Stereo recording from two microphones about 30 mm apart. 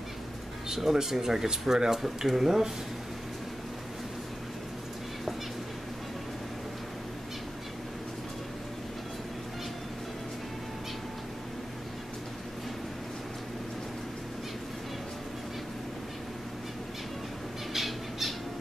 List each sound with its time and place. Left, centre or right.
0.7 s speech: centre
2.0 s speech: centre
17.7 s squawk: centre